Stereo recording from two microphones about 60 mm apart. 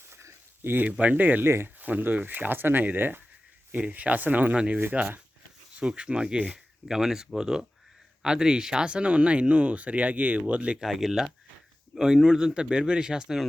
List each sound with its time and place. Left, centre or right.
0.1 s a sound: right
0.9 s speech: right
1.5 s speech: right
1.8 s speech: right
4.8 s speech: right
5.8 s speech: centre
6.8 s speech: centre
10.8 s speech: centre